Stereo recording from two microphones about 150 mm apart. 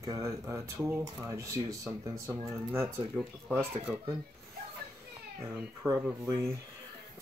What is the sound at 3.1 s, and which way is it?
Speech, 5° right (ahead or behind).